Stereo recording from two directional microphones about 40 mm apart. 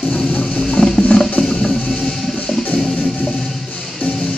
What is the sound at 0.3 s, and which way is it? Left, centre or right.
Music, left.